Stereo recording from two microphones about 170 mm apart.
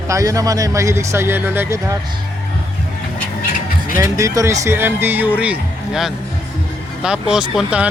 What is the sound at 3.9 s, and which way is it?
Speech, 15° right (ahead or behind).